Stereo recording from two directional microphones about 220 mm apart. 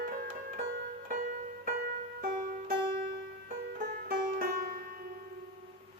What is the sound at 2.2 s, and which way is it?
Music, 35° right (ahead or behind).